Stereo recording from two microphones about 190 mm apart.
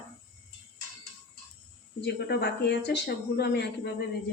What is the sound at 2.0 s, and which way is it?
Speech, 60° left (ahead or behind).